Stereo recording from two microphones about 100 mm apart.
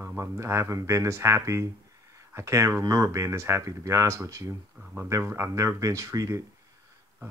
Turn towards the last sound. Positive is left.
turn(degrees=-30)  # may be behind; listen again after turning